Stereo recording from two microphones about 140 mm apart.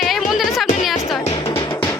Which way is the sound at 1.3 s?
40° left (ahead or behind).